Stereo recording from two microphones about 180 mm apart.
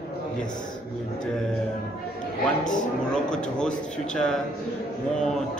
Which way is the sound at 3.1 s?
5° left (ahead or behind).